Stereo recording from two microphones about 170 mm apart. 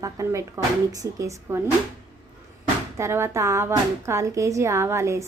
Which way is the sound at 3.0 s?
15° right (ahead or behind).